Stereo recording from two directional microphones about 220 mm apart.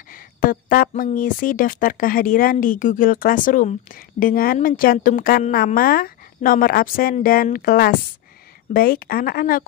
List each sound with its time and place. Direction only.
0.1 s speech: 40° left (ahead or behind)